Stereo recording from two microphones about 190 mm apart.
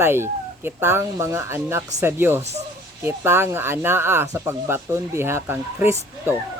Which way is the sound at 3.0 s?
10° right (ahead or behind).